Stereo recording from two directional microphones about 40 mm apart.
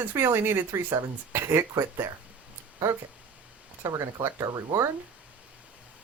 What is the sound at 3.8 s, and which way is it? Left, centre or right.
Speech, right.